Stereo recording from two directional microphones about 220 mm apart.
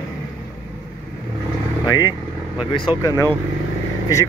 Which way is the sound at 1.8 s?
15° left (ahead or behind).